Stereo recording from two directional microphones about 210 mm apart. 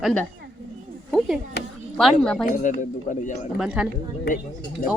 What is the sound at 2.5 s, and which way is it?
Speech, 35° left (ahead or behind).